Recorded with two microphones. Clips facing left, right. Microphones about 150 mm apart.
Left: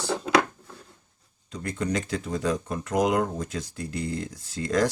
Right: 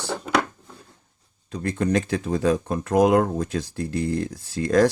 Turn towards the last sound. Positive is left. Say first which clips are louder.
# right 6 dB
turn(degrees=-55)  # may be behind; listen again after turning